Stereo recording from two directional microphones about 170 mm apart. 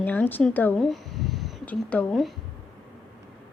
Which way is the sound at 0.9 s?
Centre (ahead or behind).